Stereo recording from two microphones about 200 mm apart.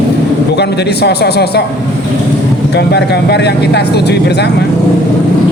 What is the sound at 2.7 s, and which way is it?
A man's voice, 55° left (ahead or behind).